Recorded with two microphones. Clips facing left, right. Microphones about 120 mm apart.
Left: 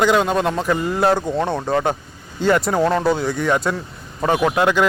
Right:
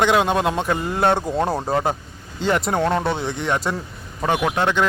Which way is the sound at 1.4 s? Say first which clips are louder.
Even; 30° right (ahead or behind).